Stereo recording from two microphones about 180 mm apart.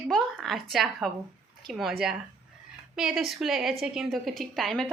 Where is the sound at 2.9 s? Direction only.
Centre (ahead or behind).